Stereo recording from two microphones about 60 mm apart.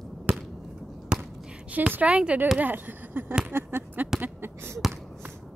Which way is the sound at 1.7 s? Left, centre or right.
Right.